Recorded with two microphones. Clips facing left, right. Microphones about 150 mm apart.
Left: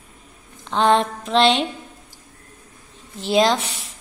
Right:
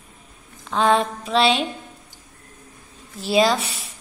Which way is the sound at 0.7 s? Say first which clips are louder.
Left 1 dB; 5° right (ahead or behind).